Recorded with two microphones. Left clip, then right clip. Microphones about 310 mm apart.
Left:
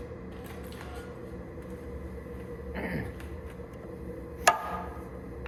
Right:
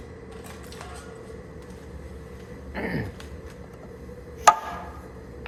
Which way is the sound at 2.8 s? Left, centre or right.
Right.